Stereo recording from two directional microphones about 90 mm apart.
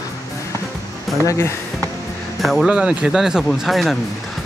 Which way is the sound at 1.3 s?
30° left (ahead or behind).